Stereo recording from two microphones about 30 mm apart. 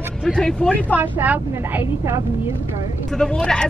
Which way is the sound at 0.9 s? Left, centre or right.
Right.